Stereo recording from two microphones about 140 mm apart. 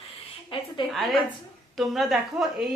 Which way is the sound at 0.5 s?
40° left (ahead or behind).